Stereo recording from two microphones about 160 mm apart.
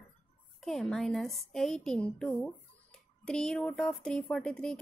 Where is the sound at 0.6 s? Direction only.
Centre (ahead or behind).